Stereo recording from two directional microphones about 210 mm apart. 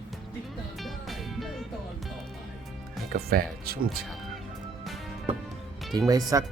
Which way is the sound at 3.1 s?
45° right (ahead or behind).